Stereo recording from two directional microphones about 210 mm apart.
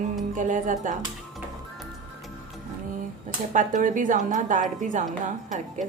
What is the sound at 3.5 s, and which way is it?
Speech, 35° right (ahead or behind).